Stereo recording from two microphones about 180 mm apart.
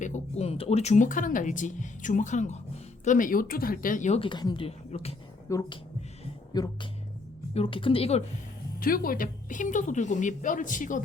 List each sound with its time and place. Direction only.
0.0 s a woman's voice: 40° left (ahead or behind)
8.8 s speech: 50° left (ahead or behind)